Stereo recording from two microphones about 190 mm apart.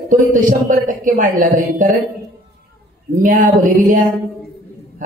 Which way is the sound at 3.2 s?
45° right (ahead or behind).